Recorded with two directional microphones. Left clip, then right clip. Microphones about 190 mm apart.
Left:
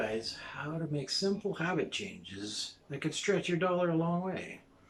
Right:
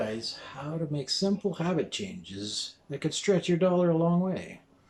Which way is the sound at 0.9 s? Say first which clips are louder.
Right 3 dB; 20° right (ahead or behind).